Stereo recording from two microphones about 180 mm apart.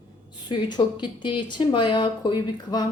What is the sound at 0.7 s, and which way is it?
Speech, 25° left (ahead or behind).